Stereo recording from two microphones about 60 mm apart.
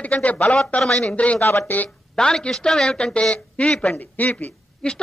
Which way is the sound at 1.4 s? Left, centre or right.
Left.